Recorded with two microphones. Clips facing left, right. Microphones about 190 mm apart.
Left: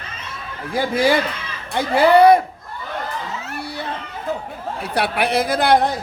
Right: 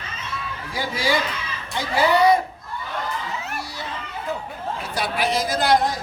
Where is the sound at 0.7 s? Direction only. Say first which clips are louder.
Left 7 dB; 55° left (ahead or behind).